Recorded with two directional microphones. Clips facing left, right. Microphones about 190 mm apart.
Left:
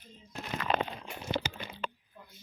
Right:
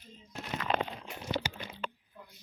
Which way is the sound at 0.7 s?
90° left.